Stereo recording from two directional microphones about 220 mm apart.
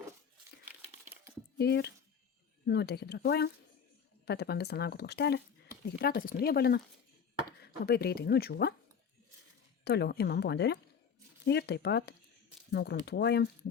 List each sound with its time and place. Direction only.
1.5 s speech: 50° left (ahead or behind)
9.8 s speech: 50° left (ahead or behind)